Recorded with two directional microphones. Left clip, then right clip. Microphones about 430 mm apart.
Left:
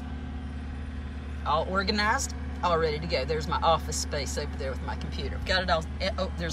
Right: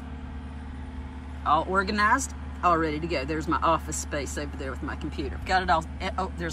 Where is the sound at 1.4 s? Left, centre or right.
Centre.